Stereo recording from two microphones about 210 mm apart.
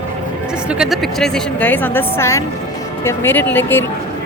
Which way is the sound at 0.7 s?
Centre (ahead or behind).